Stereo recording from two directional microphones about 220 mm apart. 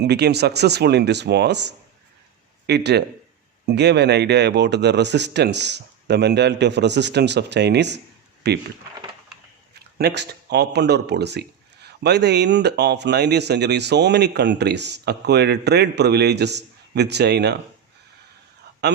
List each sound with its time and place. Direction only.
0.0 s speech: 50° right (ahead or behind)
9.7 s speech: 50° right (ahead or behind)